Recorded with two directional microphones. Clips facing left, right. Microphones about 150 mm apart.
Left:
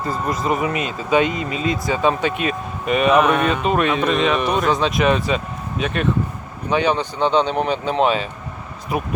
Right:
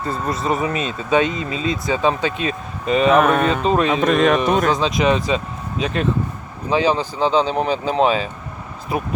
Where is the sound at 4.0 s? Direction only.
45° right (ahead or behind).